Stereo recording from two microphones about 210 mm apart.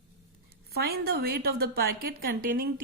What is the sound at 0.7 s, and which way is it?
A woman's voice, 50° right (ahead or behind).